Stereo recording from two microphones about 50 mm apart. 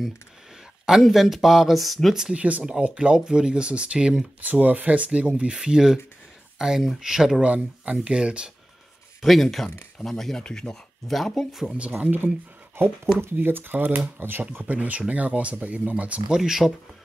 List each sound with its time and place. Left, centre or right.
1.0 s speech: centre
2.3 s speech: right
4.4 s speech: right; by 7.4 s centre
7.4 s speech: right
9.2 s speech: centre
11.1 s speech: centre
12.7 s speech: right
16.3 s speech: centre